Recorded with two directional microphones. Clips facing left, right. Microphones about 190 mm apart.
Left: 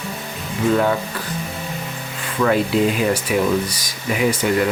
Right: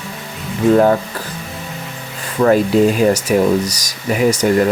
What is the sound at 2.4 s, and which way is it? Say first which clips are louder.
Speech: right 5 dB; 45° right (ahead or behind).